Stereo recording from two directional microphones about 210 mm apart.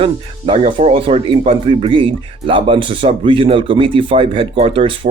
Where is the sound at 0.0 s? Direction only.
25° right (ahead or behind).